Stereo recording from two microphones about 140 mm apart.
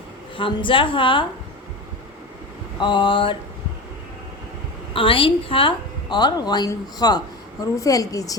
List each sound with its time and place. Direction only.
0.3 s a woman's voice: 35° left (ahead or behind)
2.8 s a woman's voice: 35° left (ahead or behind)
4.9 s a woman's voice: 40° left (ahead or behind)